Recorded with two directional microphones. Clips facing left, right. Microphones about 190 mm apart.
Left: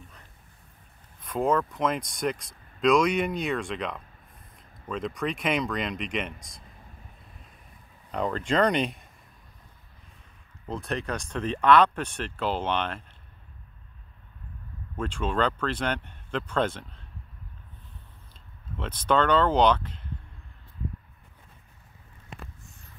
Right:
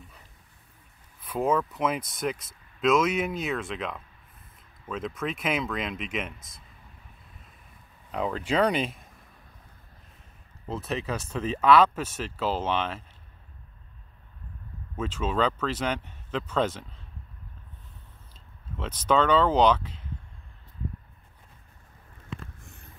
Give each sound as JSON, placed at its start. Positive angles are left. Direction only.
{"t": 1.2, "sound": "speech", "side_deg": -5}
{"t": 8.1, "sound": "speech", "side_deg": -5}
{"t": 10.7, "sound": "speech", "side_deg": -5}
{"t": 15.0, "sound": "speech", "side_deg": -5}
{"t": 18.8, "sound": "speech", "side_deg": -5}